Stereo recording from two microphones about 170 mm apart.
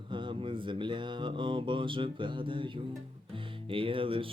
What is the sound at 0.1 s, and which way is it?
Speech, 30° right (ahead or behind).